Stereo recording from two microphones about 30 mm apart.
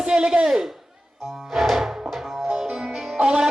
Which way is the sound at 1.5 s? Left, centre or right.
Centre.